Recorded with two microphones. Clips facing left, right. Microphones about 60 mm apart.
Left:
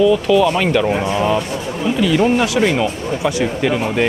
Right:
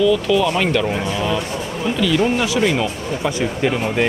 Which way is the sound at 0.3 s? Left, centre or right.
Centre.